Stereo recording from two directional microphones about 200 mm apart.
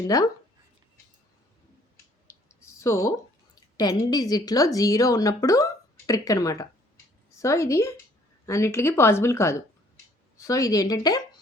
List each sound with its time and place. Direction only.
0.1 s a woman's voice: 15° left (ahead or behind)
2.8 s a woman's voice: 15° left (ahead or behind)